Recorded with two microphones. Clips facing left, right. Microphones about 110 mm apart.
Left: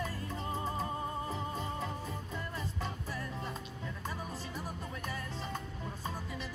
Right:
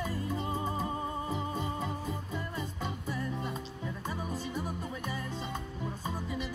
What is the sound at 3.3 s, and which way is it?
Music, 5° right (ahead or behind).